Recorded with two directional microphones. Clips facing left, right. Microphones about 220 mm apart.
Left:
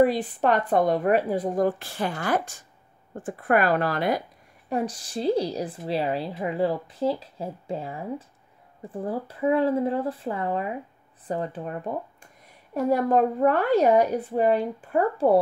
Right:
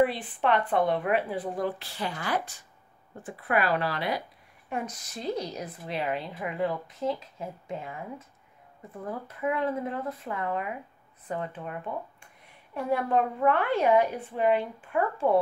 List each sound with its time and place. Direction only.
0.0 s a woman's voice: 40° left (ahead or behind)
4.6 s a woman's voice: 35° left (ahead or behind)